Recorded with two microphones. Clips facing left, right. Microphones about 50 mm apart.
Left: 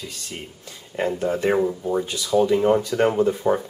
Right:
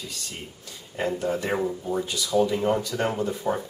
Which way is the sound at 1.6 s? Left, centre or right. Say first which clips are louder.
Left 5 dB; centre.